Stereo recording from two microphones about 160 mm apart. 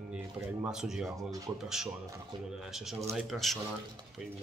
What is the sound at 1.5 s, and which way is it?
Speech, 5° right (ahead or behind).